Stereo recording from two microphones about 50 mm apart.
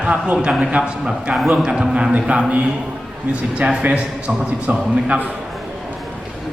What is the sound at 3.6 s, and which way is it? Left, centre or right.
A man's voice, right.